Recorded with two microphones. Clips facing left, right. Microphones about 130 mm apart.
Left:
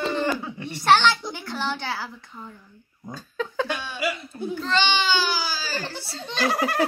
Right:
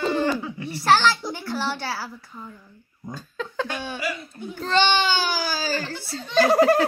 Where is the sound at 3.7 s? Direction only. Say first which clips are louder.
Right 1 dB; 50° right (ahead or behind).